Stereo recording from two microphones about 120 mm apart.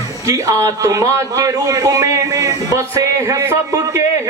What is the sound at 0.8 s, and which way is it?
A man's voice, 25° right (ahead or behind).